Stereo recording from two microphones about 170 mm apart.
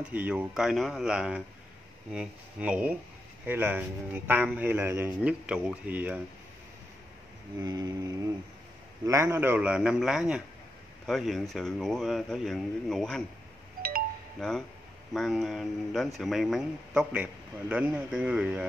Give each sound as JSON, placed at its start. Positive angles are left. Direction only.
{"t": 0.0, "sound": "a man's voice", "side_deg": -10}
{"t": 7.6, "sound": "mantra", "side_deg": -20}
{"t": 9.0, "sound": "a man's voice", "side_deg": -15}
{"t": 14.4, "sound": "a man's voice", "side_deg": 5}